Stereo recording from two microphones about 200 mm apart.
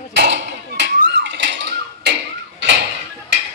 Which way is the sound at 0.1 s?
60° right (ahead or behind).